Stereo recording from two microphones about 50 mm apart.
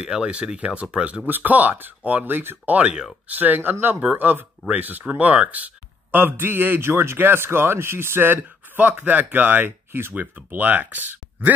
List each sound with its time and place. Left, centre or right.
0.0 s speech: centre
1.2 s speech: right
2.6 s speech: right
6.1 s speech: right
6.8 s speech: right